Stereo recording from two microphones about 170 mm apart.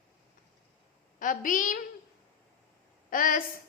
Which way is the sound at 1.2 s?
50° left (ahead or behind).